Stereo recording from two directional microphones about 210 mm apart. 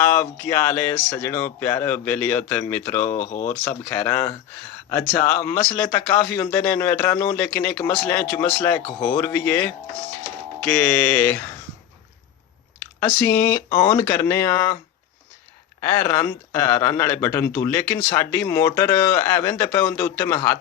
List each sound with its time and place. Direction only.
0.0 s speech: 10° left (ahead or behind)
3.2 s speech: 35° left (ahead or behind)
3.6 s speech: 10° left (ahead or behind)
13.0 s speech: 10° left (ahead or behind)
15.8 s speech: 10° left (ahead or behind)